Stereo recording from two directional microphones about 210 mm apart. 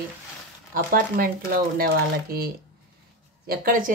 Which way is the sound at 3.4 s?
45° right (ahead or behind).